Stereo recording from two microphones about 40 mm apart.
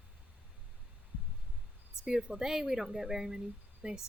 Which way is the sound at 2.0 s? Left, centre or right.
Centre.